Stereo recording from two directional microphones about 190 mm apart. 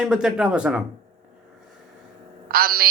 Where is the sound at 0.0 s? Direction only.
5° right (ahead or behind).